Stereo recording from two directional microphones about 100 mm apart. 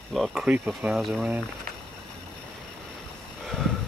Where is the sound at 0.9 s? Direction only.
Centre (ahead or behind).